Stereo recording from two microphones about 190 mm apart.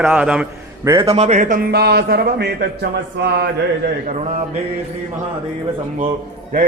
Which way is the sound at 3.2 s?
65° right (ahead or behind).